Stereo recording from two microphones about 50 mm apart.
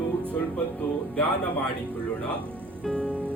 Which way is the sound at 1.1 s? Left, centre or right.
Left.